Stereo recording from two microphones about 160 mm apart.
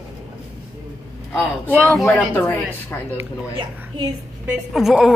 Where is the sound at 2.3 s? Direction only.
15° left (ahead or behind).